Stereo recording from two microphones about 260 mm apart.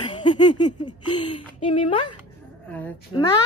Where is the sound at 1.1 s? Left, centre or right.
Centre.